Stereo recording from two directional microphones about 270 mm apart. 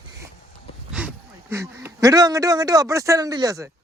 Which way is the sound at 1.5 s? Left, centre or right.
Centre.